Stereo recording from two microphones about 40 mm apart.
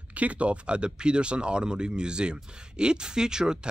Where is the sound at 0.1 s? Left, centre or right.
Right.